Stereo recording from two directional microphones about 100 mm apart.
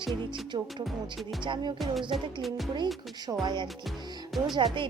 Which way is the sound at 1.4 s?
55° right (ahead or behind).